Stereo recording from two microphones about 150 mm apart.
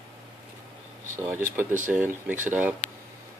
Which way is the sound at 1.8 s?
10° right (ahead or behind).